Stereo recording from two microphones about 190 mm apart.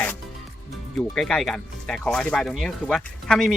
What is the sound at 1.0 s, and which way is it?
Speech, 5° left (ahead or behind).